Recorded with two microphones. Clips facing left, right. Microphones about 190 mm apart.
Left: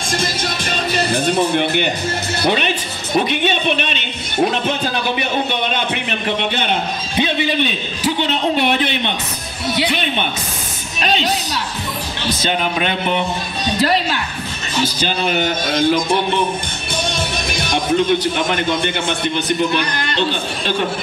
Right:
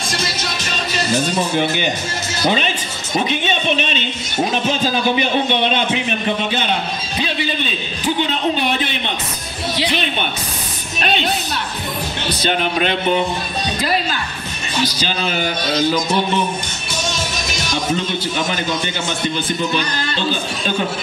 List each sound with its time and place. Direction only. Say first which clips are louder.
0.1 s speech: left 5 dB; 50° left (ahead or behind)
7.2 s a man's voice: left 5 dB; 20° left (ahead or behind)
15.6 s speech: even; 50° left (ahead or behind)
17.1 s music: left 2 dB; 55° left (ahead or behind)
18.5 s a man's voice: left 3 dB; 55° left (ahead or behind)